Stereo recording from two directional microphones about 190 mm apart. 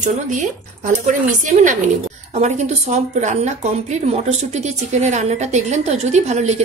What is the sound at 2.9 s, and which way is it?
Speech, 35° right (ahead or behind).